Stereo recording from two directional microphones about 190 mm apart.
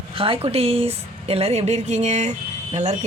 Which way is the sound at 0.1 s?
30° right (ahead or behind).